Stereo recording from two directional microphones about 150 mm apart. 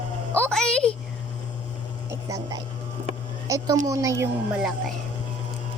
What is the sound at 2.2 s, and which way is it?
A woman's voice, 25° right (ahead or behind).